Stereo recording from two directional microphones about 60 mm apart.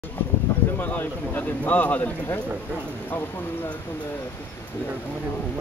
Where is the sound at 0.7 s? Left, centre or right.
Left.